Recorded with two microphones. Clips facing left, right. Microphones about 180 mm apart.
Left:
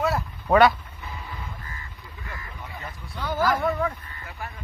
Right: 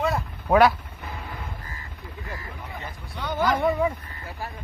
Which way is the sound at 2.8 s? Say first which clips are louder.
Left 2 dB; 5° left (ahead or behind).